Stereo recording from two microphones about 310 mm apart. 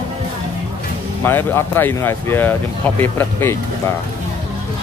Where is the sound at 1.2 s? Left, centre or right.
Centre.